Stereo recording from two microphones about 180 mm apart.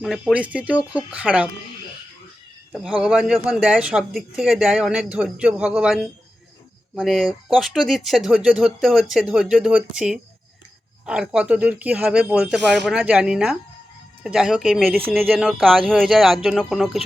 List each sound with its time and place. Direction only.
0.0 s speech: 5° right (ahead or behind)
2.7 s speech: 5° right (ahead or behind)